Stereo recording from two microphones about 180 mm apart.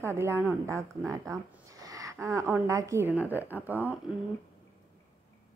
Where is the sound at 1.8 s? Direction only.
20° right (ahead or behind).